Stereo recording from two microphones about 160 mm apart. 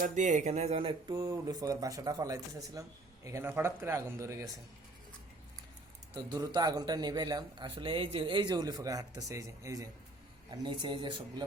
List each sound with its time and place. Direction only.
0.0 s speech: 50° right (ahead or behind); by 1.1 s 35° right (ahead or behind)
1.1 s speech: 20° right (ahead or behind)
6.1 s speech: 25° right (ahead or behind)